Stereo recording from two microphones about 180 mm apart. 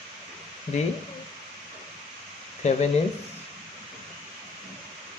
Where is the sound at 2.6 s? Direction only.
40° left (ahead or behind).